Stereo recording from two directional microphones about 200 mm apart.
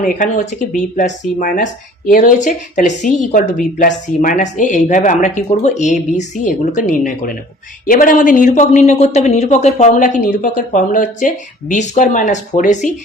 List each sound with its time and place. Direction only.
0.0 s speech: 40° left (ahead or behind)